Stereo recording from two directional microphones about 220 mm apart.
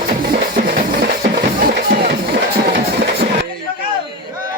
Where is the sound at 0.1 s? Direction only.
40° right (ahead or behind).